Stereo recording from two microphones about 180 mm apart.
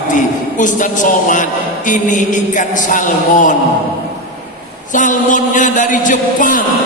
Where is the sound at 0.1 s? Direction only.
45° left (ahead or behind).